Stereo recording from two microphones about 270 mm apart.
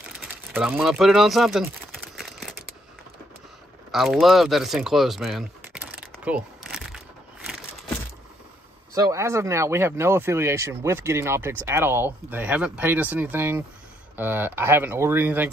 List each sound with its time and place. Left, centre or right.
0.2 s speech: centre
3.9 s speech: centre
8.9 s speech: centre